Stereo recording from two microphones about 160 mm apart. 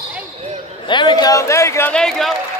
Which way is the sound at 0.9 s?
30° left (ahead or behind).